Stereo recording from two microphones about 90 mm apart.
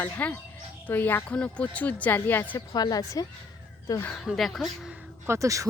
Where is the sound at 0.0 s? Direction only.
20° left (ahead or behind).